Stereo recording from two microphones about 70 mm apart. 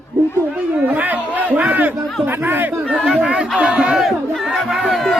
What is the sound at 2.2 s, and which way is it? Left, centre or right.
Speech, right.